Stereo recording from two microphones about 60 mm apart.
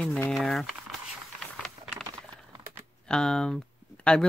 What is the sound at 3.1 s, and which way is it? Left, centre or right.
Speech, centre.